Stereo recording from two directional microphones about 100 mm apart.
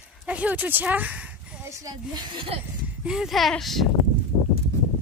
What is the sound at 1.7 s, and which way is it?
Speech, 35° right (ahead or behind).